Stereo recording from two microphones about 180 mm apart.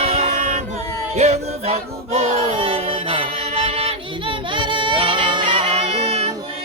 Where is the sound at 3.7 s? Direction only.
30° right (ahead or behind).